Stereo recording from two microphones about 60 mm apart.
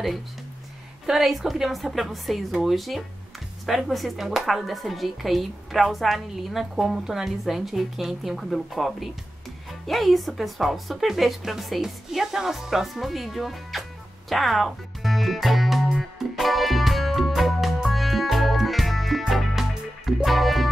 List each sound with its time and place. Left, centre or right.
1.0 s speech: centre
14.3 s music: centre